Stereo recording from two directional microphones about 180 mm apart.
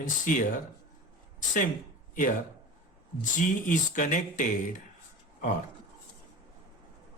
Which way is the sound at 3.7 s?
50° left (ahead or behind).